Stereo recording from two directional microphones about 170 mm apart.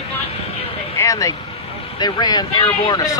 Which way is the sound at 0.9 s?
20° left (ahead or behind).